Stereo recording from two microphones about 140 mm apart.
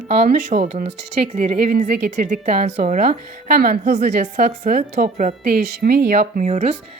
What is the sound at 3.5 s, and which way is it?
Speech, 90° right.